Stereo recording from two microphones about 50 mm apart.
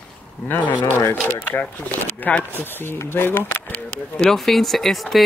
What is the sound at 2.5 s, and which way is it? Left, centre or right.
Speech, left.